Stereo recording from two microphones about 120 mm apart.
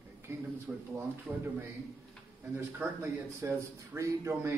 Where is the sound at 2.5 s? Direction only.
20° right (ahead or behind).